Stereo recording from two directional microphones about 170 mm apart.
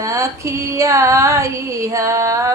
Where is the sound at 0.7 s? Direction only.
20° right (ahead or behind).